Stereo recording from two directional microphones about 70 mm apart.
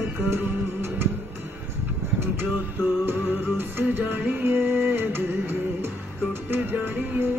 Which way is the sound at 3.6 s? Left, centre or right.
Right.